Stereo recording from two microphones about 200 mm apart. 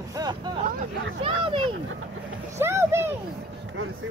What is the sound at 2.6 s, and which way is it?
Speech, 15° right (ahead or behind).